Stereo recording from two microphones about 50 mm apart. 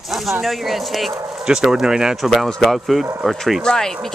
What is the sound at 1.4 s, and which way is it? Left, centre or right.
Speech, centre.